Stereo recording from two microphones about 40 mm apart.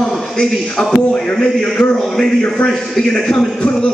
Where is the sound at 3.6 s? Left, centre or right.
Left.